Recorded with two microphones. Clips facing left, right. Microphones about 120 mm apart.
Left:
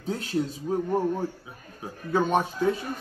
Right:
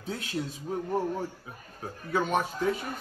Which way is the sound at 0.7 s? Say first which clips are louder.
Left 3 dB; 25° left (ahead or behind).